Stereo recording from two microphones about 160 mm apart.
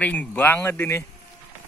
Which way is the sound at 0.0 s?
10° left (ahead or behind).